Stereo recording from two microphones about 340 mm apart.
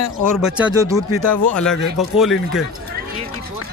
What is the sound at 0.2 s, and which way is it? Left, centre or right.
Speech, centre.